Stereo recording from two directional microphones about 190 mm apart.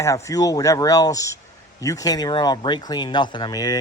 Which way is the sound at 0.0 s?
15° left (ahead or behind).